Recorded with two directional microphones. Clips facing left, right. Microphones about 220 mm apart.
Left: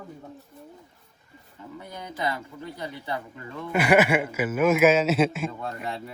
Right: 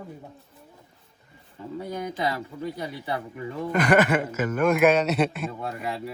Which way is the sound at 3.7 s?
10° left (ahead or behind).